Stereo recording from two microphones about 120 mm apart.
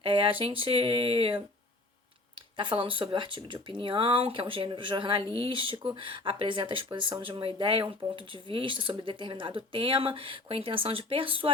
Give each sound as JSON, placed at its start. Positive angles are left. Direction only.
{"t": 0.0, "sound": "speech", "side_deg": -45}
{"t": 2.6, "sound": "speech", "side_deg": -45}